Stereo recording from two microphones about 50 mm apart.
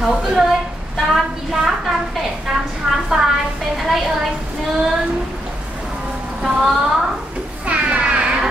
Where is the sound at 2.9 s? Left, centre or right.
Centre.